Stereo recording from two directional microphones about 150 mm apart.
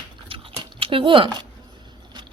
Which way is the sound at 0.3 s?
35° right (ahead or behind).